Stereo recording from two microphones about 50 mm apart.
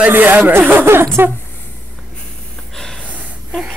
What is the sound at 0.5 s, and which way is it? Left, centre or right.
Speech, right.